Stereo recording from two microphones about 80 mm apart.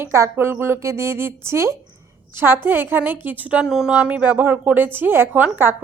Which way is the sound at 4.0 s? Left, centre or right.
Centre.